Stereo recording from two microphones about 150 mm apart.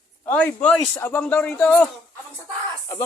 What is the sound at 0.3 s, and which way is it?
Speech, 10° left (ahead or behind).